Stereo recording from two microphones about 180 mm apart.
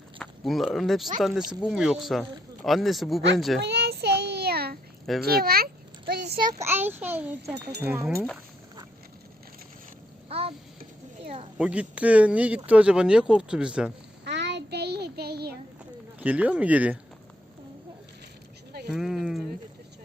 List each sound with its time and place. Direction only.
0.2 s speech: centre (ahead or behind)
3.6 s child singing: 65° right (ahead or behind)
5.2 s speech: 60° right (ahead or behind)
6.6 s speech: 10° right (ahead or behind)
7.5 s speech: 65° right (ahead or behind)
7.8 s speech: 10° right (ahead or behind)
10.2 s a sound: 35° right (ahead or behind)
11.5 s speech: 5° right (ahead or behind)
14.3 s child singing: 75° right (ahead or behind)
16.2 s speech: 10° right (ahead or behind)
18.7 s a sound: 65° right (ahead or behind)
18.9 s a sound: centre (ahead or behind)